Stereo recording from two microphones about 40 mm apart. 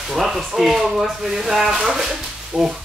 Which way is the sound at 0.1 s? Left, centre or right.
Centre.